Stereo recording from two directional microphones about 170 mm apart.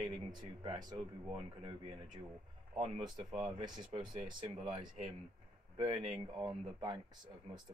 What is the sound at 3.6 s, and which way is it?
Speech, 25° right (ahead or behind).